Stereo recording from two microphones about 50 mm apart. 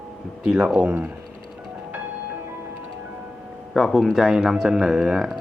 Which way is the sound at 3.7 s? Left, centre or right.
Centre.